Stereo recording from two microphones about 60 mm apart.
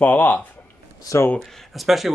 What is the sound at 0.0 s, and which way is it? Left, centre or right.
Speech, left.